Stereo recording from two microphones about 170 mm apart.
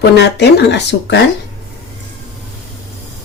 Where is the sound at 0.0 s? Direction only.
75° left (ahead or behind).